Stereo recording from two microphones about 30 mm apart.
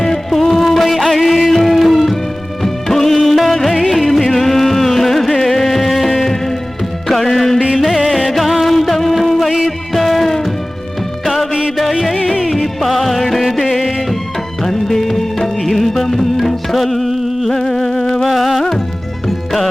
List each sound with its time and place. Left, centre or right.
0.3 s music of bollywood: centre
3.2 s music: centre
11.8 s music: centre
16.7 s a sound: centre
17.5 s humming: centre
18.0 s music: centre
18.3 s music: centre